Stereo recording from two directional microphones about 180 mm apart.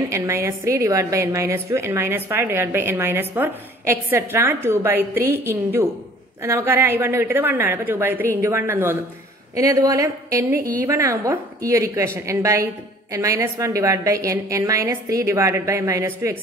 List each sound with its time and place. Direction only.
0.1 s a woman's voice: 15° right (ahead or behind)